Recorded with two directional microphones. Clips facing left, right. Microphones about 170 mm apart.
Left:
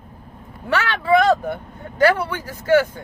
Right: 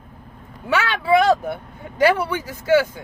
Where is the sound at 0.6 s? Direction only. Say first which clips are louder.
Even; 5° right (ahead or behind).